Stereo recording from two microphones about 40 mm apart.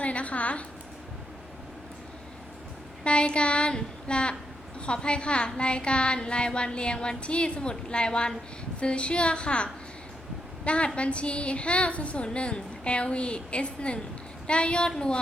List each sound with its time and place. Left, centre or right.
0.0 s a woman's voice: left
3.0 s a woman's voice: left